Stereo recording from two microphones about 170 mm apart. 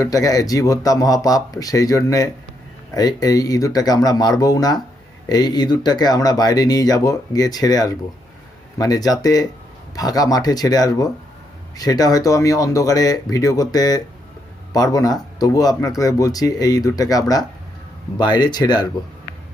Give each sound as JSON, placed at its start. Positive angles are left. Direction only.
{"t": 0.0, "sound": "speech", "side_deg": 20}